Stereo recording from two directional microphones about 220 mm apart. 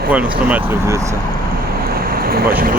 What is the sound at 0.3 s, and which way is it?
Speech, 5° right (ahead or behind).